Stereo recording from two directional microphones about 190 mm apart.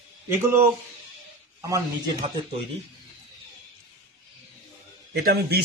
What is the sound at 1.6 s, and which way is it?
Speech, 20° right (ahead or behind).